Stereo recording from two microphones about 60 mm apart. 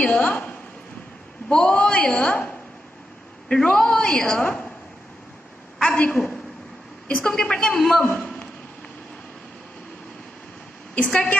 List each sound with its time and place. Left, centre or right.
0.0 s a woman's voice: left
5.9 s a woman's voice: left
6.1 s a woman's voice: centre
7.1 s a woman's voice: left
7.3 s a woman's voice: centre
11.0 s a woman's voice: centre